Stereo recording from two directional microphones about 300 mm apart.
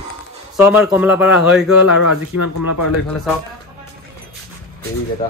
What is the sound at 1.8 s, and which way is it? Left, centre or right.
Speech, left.